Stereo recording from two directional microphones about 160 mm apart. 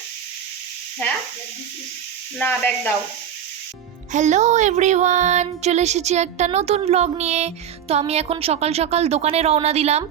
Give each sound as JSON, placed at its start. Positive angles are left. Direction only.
{"t": 2.4, "sound": "speech", "side_deg": 10}
{"t": 4.1, "sound": "speech", "side_deg": -50}